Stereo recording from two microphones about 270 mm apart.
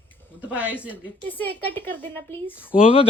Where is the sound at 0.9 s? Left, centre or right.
Centre.